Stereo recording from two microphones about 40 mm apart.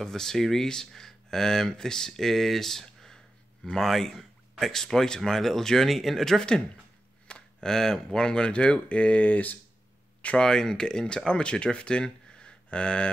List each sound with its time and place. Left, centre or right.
0.0 s speech: centre
7.2 s a sound: left
7.7 s speech: centre; by 9.6 s left
10.3 s speech: centre